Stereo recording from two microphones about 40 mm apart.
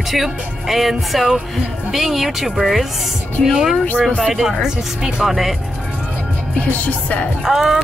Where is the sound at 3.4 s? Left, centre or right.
Left.